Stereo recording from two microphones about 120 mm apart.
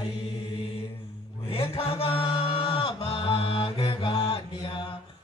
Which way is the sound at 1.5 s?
50° left (ahead or behind).